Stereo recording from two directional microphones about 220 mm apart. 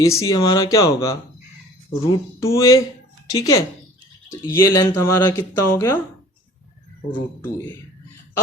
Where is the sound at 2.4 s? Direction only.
15° left (ahead or behind).